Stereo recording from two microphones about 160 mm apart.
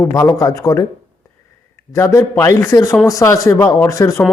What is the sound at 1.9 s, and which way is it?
A man's voice, 20° left (ahead or behind).